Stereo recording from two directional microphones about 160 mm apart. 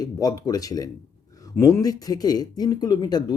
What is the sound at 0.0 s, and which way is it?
Speech, 25° left (ahead or behind).